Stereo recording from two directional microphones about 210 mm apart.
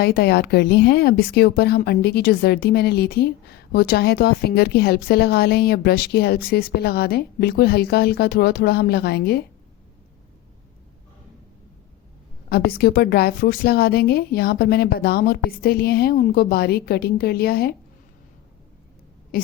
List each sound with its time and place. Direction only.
0.0 s a woman's voice: 50° left (ahead or behind)
12.5 s a woman's voice: 45° left (ahead or behind)
19.3 s a woman's voice: 45° left (ahead or behind)